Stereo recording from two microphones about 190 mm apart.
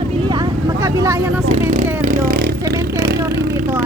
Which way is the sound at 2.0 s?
45° right (ahead or behind).